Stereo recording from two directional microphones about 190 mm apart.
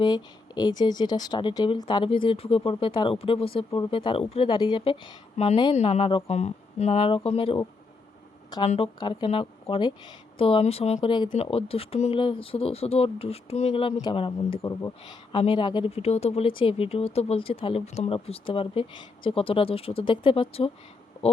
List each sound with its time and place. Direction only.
0.0 s speech: 20° left (ahead or behind)
8.6 s speech: 35° left (ahead or behind)